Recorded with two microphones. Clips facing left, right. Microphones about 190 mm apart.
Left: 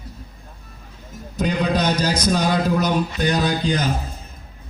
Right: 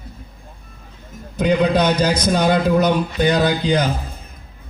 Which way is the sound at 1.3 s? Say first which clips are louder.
Right 5 dB; 55° right (ahead or behind).